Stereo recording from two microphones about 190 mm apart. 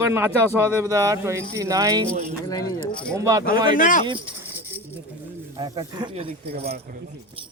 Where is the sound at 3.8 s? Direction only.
45° left (ahead or behind).